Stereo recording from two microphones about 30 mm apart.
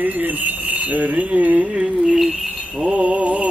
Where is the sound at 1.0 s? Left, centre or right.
Right.